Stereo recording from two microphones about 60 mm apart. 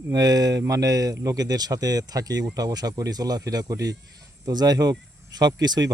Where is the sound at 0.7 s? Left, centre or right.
Right.